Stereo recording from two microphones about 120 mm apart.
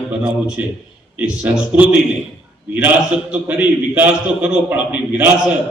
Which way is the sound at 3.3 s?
15° right (ahead or behind).